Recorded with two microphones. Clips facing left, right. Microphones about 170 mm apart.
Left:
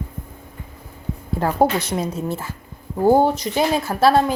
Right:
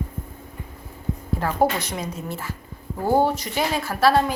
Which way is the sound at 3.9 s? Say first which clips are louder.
Left 4 dB; 30° left (ahead or behind).